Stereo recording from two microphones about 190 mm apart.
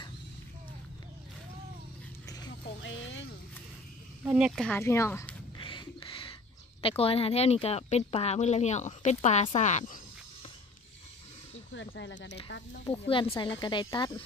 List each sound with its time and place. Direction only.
2.8 s a sound: 80° left
4.2 s speech: 5° right (ahead or behind)
4.7 s speech: 15° left (ahead or behind)
5.6 s a sound: 25° left (ahead or behind)
6.8 s speech: 30° left (ahead or behind)
11.7 s speech: 75° left (ahead or behind)
12.8 s speech: 25° left (ahead or behind)